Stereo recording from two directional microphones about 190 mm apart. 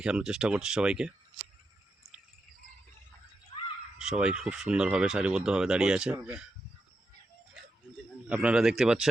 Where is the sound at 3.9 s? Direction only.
5° right (ahead or behind).